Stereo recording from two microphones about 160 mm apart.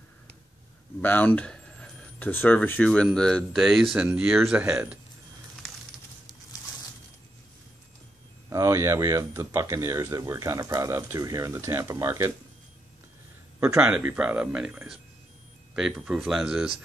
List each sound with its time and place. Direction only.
1.0 s speech: 10° left (ahead or behind)
4.5 s speech: 15° right (ahead or behind)
8.5 s speech: 20° right (ahead or behind)
13.7 s speech: 5° right (ahead or behind)